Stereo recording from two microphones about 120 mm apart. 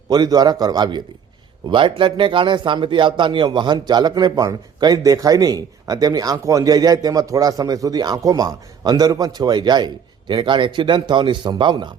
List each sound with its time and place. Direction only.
0.1 s speech: 35° right (ahead or behind)